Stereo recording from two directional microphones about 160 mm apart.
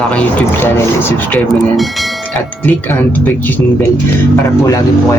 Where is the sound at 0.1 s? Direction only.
10° left (ahead or behind).